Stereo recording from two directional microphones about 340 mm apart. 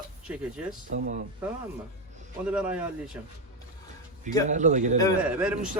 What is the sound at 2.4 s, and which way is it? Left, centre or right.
Speech, centre.